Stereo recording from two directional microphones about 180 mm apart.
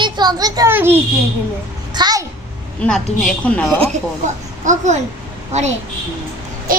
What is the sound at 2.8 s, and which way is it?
A woman's voice, 5° left (ahead or behind).